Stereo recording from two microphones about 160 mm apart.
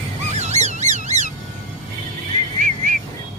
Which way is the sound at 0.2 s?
45° right (ahead or behind).